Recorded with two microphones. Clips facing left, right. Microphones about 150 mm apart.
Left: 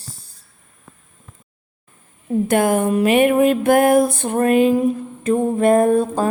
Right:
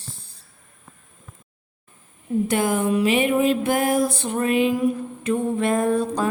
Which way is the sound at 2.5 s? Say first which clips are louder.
Left 5 dB; 55° left (ahead or behind).